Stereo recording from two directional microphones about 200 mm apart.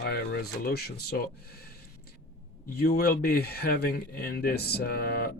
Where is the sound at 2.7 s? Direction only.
50° left (ahead or behind).